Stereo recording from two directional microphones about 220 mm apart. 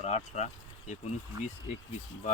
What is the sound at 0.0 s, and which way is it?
Speech, 30° left (ahead or behind).